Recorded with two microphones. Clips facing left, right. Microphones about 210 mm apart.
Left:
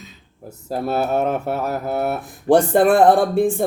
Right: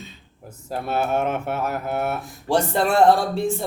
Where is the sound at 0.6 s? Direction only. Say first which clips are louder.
Left 3 dB; 40° left (ahead or behind).